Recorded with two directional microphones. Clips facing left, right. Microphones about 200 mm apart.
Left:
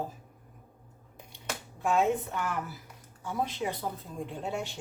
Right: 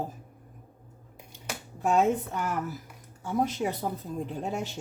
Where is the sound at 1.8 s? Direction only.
40° right (ahead or behind).